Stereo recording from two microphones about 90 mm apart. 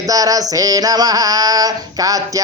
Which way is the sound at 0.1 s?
40° right (ahead or behind).